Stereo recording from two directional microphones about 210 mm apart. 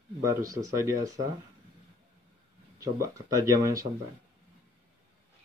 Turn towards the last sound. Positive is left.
turn(degrees=-15)  # may be behind; listen again after turning